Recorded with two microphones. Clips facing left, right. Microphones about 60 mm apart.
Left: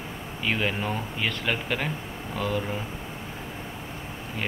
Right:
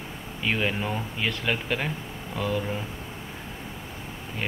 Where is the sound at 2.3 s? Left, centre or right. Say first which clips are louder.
Even; right.